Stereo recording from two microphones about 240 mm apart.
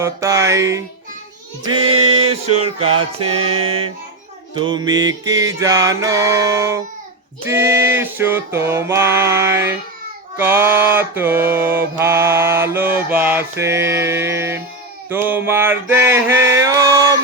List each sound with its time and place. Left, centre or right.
0.0 s mantra: centre
1.6 s a sound: right
2.6 s music: right
4.5 s mantra: centre